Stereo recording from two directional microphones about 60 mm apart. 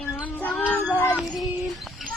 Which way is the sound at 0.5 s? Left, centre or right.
Left.